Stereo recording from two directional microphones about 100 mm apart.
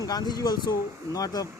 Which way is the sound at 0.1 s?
45° left (ahead or behind).